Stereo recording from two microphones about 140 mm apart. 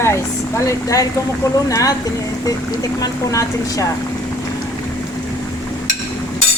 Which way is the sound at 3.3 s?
25° left (ahead or behind).